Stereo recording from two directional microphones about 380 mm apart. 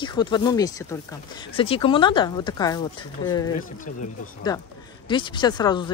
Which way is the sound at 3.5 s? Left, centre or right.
Left.